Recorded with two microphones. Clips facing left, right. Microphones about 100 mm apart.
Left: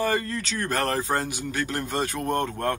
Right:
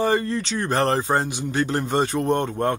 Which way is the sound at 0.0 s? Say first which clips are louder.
Right 4 dB; 25° right (ahead or behind).